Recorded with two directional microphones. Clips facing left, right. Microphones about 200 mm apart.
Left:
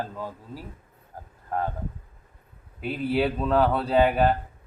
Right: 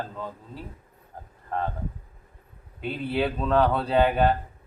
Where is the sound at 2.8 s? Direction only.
5° left (ahead or behind).